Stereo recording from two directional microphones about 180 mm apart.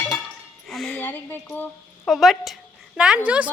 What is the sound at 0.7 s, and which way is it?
Speech, centre (ahead or behind).